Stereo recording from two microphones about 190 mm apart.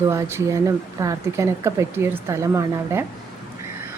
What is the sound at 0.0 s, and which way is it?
A woman's voice, 15° right (ahead or behind).